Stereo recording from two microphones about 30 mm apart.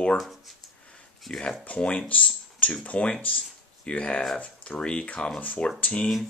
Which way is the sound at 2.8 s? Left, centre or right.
Left.